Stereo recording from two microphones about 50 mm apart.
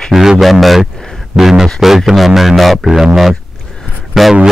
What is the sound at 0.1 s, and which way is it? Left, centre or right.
Speech, centre.